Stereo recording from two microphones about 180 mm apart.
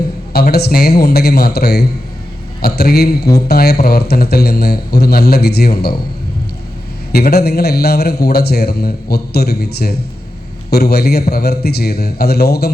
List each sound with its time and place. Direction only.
0.3 s a man's voice: 60° left (ahead or behind)
7.1 s a man's voice: 60° left (ahead or behind)